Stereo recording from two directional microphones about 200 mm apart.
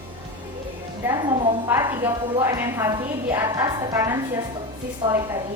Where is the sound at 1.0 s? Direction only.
20° right (ahead or behind).